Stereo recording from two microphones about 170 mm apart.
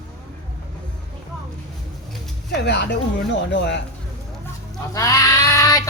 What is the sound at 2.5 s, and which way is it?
Speech, 85° left.